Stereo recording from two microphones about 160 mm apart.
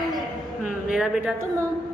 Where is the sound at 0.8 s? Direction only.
5° right (ahead or behind).